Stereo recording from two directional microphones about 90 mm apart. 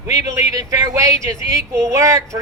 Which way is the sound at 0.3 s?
35° right (ahead or behind).